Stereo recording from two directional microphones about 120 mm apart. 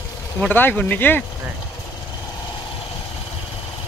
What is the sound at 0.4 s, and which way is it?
Speech, 15° left (ahead or behind).